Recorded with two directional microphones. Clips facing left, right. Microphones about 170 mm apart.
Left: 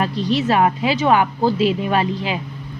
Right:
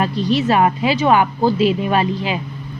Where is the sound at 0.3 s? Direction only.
15° right (ahead or behind).